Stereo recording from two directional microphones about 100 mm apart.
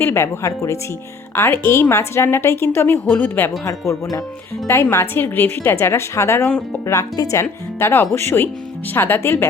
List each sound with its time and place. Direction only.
0.0 s a woman's voice: 25° left (ahead or behind)
4.6 s a woman's voice: 25° left (ahead or behind)